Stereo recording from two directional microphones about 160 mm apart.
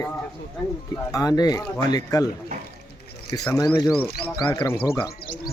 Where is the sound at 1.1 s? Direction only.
25° left (ahead or behind).